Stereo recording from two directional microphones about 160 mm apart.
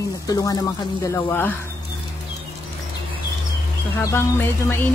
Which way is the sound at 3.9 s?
15° left (ahead or behind).